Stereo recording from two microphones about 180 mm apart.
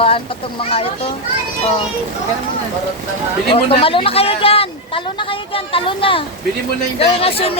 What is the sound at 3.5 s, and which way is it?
Speech, 30° left (ahead or behind).